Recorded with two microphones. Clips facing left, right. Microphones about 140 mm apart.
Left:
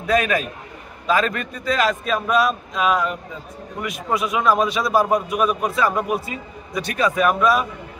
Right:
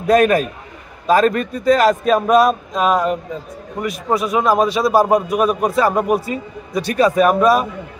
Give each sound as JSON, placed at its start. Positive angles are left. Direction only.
{"t": 0.0, "sound": "a man's voice", "side_deg": -45}